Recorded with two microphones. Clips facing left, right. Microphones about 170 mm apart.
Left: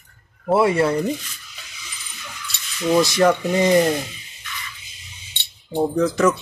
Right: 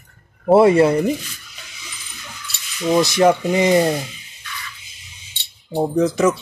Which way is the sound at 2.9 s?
15° right (ahead or behind).